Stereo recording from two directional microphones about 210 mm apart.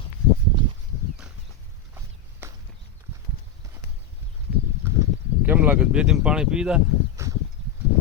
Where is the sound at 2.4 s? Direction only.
10° right (ahead or behind).